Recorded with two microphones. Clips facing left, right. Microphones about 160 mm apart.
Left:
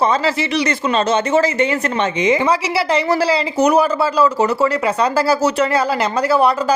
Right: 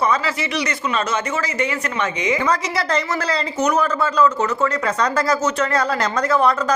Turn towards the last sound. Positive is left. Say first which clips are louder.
# left 3 dB
turn(degrees=10)  # may be behind; listen again after turning